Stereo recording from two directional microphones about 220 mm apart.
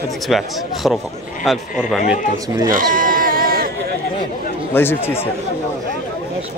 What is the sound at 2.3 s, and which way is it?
Speech, 15° right (ahead or behind).